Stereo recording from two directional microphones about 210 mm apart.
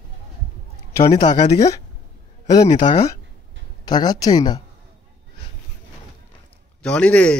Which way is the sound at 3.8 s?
20° left (ahead or behind).